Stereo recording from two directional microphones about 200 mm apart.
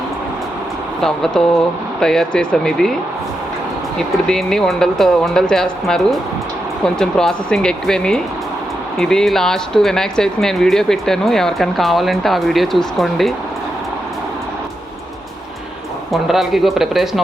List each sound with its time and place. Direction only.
1.0 s speech: 5° left (ahead or behind)
3.9 s speech: 5° left (ahead or behind)
16.1 s speech: centre (ahead or behind)